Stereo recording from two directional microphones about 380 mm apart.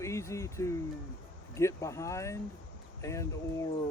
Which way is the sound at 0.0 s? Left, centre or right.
Centre.